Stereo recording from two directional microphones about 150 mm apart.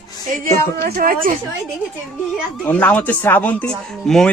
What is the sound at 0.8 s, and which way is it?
Speech, 80° right.